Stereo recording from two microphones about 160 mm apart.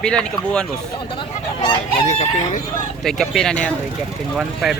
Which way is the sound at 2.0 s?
45° left (ahead or behind).